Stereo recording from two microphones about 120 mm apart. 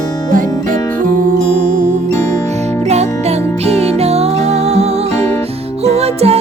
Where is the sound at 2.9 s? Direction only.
65° right (ahead or behind).